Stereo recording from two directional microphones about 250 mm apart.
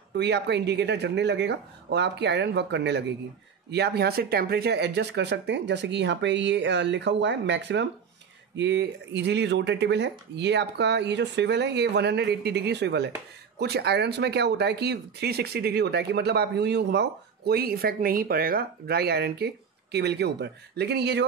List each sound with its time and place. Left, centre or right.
0.1 s speech: right